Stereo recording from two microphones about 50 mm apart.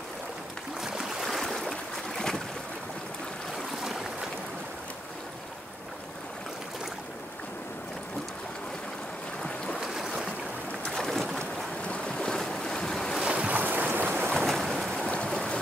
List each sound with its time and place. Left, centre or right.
0.7 s stream: centre
1.2 s a sound: centre
9.8 s stream: centre
11.0 s boat: centre
11.9 s boat: left
12.4 s boat: centre
13.2 s boat: right
14.4 s boat: centre
15.2 s stream: centre